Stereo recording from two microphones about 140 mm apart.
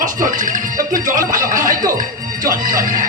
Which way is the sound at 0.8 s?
70° right (ahead or behind).